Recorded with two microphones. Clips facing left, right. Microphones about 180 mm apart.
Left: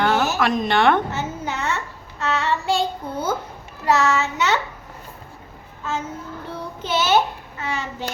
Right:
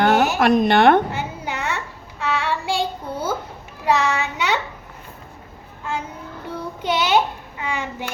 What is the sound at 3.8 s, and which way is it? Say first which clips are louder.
Speech: left 1 dB; 15° right (ahead or behind).